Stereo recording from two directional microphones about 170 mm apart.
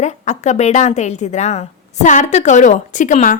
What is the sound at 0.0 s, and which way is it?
A woman's voice, 45° left (ahead or behind).